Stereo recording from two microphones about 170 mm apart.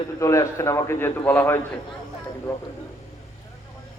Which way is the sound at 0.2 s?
15° left (ahead or behind).